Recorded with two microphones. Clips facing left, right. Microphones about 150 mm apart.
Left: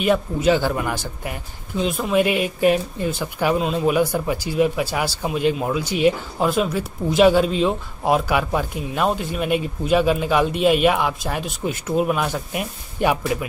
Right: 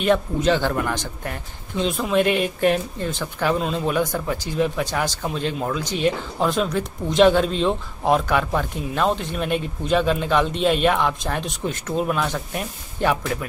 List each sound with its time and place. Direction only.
0.0 s a man's voice: 5° left (ahead or behind)